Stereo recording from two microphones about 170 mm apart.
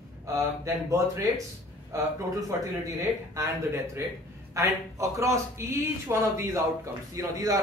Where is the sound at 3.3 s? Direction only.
15° right (ahead or behind).